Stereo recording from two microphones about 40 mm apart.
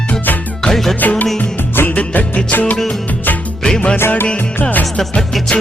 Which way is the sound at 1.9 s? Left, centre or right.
Left.